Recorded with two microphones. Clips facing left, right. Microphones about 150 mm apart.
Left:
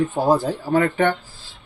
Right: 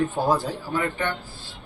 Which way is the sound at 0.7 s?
75° left (ahead or behind).